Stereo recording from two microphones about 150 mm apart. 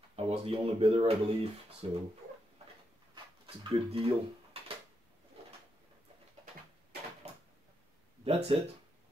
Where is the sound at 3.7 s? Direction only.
40° right (ahead or behind).